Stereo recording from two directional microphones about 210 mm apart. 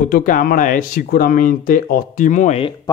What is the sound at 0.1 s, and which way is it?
Speech, 40° left (ahead or behind).